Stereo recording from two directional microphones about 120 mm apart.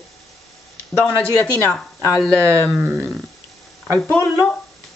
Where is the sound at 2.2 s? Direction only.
25° right (ahead or behind).